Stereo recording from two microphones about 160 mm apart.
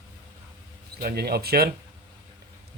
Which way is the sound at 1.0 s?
70° right (ahead or behind).